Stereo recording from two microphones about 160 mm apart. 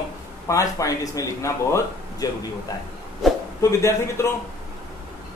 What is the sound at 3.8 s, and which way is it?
Speech, 15° left (ahead or behind).